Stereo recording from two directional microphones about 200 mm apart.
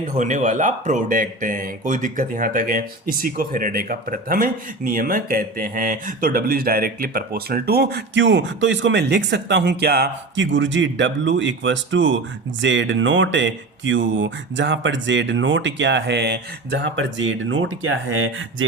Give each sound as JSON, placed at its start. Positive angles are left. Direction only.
{"t": 0.2, "sound": "speech", "side_deg": -40}